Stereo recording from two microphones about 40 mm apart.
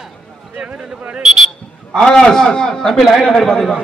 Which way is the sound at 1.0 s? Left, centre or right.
Right.